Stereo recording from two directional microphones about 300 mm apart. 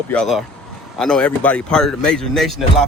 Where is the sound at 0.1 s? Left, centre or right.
Centre.